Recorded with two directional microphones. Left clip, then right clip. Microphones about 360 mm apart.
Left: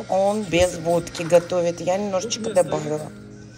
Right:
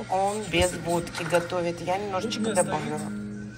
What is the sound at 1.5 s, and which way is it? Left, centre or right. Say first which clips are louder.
Speech: left 6 dB; centre.